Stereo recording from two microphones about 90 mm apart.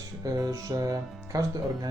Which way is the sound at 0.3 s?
40° right (ahead or behind).